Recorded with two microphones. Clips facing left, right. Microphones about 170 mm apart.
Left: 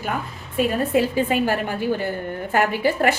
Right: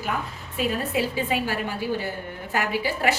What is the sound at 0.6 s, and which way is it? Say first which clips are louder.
A woman's voice: left 6 dB; 50° left (ahead or behind).